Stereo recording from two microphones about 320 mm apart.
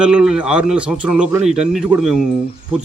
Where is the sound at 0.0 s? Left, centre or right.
Centre.